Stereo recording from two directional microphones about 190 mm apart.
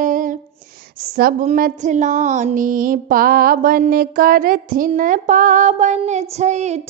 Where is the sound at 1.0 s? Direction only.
50° right (ahead or behind).